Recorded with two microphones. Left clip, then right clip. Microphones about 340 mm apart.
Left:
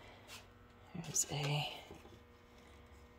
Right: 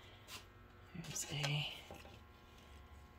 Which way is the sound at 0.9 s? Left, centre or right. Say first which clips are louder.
Left 5 dB; centre.